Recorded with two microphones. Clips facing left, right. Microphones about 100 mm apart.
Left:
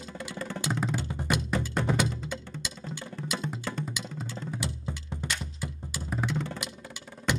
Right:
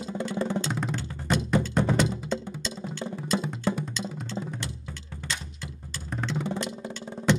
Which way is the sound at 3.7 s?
20° right (ahead or behind).